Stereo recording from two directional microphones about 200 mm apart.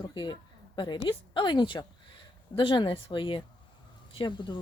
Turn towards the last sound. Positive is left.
turn(degrees=25)  # may be behind; listen again after turning